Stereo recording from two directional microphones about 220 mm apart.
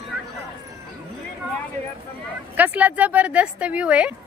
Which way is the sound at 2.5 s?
5° right (ahead or behind).